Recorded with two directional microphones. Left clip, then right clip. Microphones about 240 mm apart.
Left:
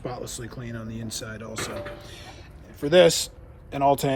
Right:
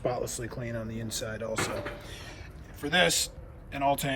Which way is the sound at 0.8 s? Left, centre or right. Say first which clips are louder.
Left 2 dB; centre.